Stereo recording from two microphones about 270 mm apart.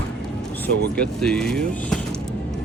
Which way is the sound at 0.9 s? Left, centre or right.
Centre.